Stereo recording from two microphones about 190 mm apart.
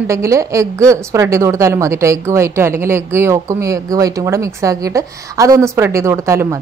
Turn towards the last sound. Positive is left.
turn(degrees=-15)  # may be behind; listen again after turning